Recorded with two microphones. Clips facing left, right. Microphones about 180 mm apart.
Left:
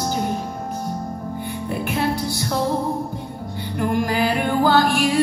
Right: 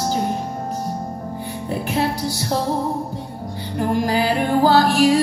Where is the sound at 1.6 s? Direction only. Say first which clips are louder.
Right 1 dB; 35° right (ahead or behind).